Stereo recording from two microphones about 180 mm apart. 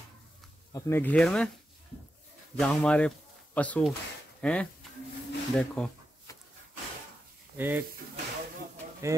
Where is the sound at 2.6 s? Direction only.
5° left (ahead or behind).